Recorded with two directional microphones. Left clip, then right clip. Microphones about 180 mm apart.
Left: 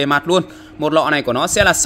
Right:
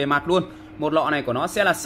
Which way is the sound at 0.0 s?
50° left (ahead or behind).